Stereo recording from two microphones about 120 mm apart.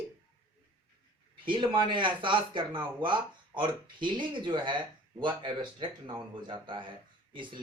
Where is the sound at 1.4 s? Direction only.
45° right (ahead or behind).